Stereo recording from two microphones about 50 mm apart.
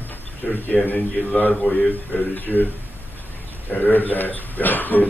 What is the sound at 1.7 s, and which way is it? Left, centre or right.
Speech, left.